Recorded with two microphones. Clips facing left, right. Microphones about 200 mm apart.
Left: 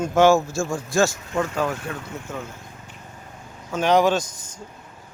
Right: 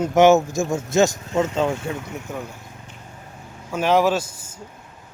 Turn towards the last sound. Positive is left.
turn(degrees=-5)  # may be behind; listen again after turning